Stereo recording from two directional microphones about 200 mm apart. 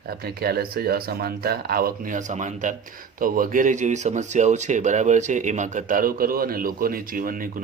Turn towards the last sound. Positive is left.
turn(degrees=-45)  # may be behind; listen again after turning